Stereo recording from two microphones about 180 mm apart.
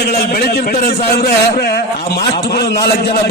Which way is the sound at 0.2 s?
60° left (ahead or behind).